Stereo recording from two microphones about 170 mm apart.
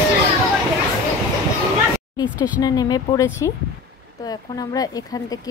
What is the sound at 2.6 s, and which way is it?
Speech, 20° left (ahead or behind).